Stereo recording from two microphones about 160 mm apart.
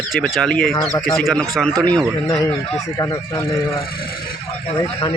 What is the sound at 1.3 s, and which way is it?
Speech, 5° left (ahead or behind).